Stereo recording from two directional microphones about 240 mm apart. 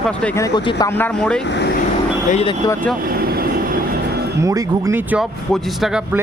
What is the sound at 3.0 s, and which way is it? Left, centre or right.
Vehicle, right.